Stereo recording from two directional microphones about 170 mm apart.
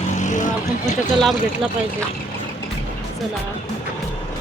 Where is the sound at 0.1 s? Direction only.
45° left (ahead or behind).